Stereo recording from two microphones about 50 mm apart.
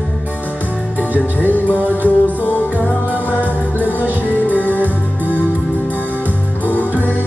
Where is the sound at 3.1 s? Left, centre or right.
Right.